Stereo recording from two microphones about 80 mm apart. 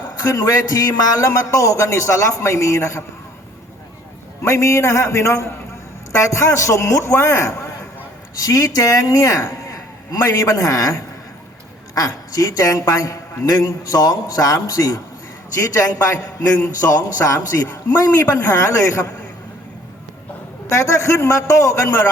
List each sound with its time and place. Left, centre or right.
0.2 s a man's voice: left
4.4 s a man's voice: left
20.7 s a man's voice: left